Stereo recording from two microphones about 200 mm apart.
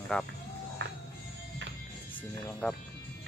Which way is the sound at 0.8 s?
65° right (ahead or behind).